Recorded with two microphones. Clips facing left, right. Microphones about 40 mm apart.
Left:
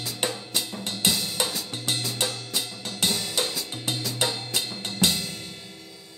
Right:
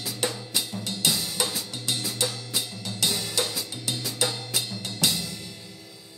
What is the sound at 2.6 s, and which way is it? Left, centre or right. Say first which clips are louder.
Music: even; left.